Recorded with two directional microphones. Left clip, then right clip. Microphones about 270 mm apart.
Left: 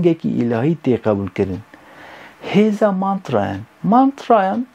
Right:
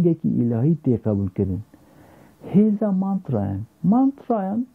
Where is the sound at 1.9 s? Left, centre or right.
Centre.